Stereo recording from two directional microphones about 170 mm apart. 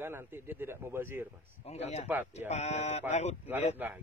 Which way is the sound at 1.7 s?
40° left (ahead or behind).